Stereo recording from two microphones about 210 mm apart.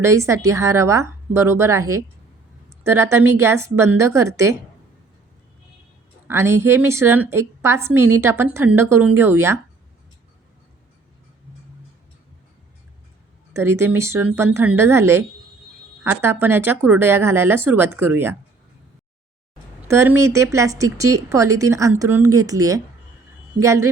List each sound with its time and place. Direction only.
0.0 s a woman's voice: 15° right (ahead or behind)
6.2 s a woman's voice: 10° right (ahead or behind)
13.5 s a woman's voice: 10° right (ahead or behind)
19.9 s a woman's voice: 15° right (ahead or behind)